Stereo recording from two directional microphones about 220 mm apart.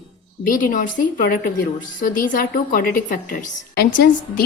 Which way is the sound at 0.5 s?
40° left (ahead or behind).